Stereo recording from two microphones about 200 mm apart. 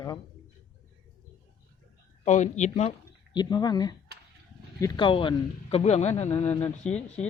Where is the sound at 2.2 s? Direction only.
35° left (ahead or behind).